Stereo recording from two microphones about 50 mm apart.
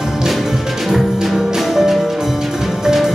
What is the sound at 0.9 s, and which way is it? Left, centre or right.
Music, centre.